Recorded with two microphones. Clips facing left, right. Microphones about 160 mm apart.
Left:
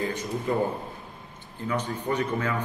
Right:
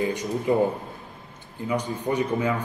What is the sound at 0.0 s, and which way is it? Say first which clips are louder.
Speech: right 4 dB; 15° right (ahead or behind).